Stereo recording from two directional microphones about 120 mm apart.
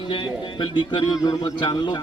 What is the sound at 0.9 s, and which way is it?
A man's voice, 40° left (ahead or behind).